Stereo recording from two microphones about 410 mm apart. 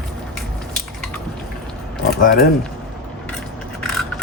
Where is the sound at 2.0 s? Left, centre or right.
Left.